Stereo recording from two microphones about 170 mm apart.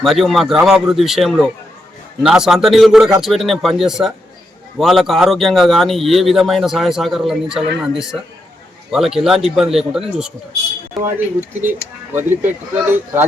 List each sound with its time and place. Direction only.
0.0 s speech: centre (ahead or behind)
12.1 s speech: 10° right (ahead or behind)